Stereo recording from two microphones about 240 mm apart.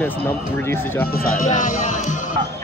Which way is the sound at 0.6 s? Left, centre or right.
Centre.